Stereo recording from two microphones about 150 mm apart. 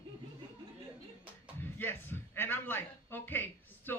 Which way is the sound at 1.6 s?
15° left (ahead or behind).